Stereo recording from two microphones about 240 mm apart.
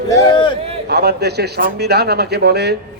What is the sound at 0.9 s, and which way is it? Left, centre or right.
Speech, right.